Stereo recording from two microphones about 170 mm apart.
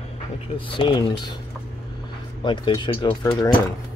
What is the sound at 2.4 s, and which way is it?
Speech, 25° left (ahead or behind).